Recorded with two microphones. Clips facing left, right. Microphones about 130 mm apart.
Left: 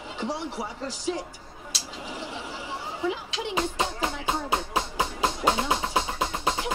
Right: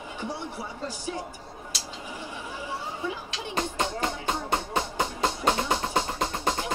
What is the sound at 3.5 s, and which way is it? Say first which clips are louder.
Music: even; 5° left (ahead or behind).